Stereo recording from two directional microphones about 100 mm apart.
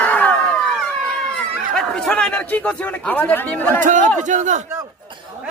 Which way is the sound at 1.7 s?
10° left (ahead or behind).